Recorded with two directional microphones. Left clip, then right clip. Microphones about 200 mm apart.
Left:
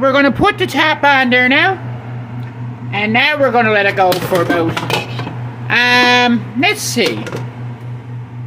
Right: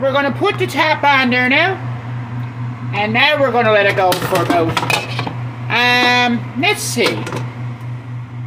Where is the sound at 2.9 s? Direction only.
40° left (ahead or behind).